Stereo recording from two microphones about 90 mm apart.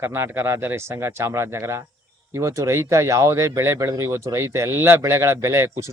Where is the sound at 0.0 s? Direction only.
25° right (ahead or behind).